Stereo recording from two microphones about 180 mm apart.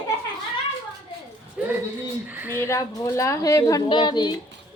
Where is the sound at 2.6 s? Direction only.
15° left (ahead or behind).